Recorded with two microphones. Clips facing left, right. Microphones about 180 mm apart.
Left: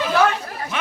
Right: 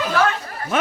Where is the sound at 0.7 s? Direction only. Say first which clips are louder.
Right 8 dB; 45° right (ahead or behind).